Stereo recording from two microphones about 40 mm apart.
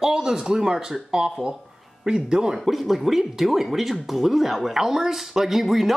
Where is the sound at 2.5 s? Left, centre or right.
Centre.